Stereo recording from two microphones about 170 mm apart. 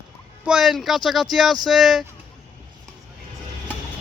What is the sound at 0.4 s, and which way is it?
Speech, 5° right (ahead or behind).